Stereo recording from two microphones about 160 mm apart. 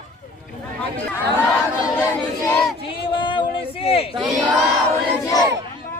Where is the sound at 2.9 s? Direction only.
30° left (ahead or behind).